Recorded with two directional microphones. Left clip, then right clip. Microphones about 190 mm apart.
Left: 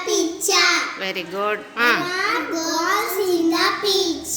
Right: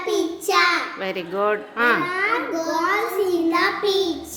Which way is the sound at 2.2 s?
Centre (ahead or behind).